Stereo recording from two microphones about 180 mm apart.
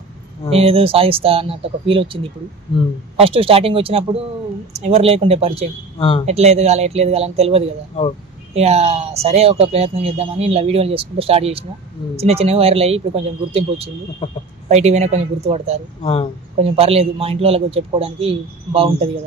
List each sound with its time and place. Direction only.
0.5 s speech: 35° right (ahead or behind)
3.2 s speech: 30° right (ahead or behind)
5.9 s speech: 30° left (ahead or behind)
6.2 s speech: 35° right (ahead or behind)
8.0 s speech: 30° left (ahead or behind)
8.5 s speech: 35° right (ahead or behind)
14.2 s speech: 35° left (ahead or behind)
14.7 s speech: 40° right (ahead or behind)
16.0 s speech: 30° left (ahead or behind)
16.5 s speech: 35° right (ahead or behind)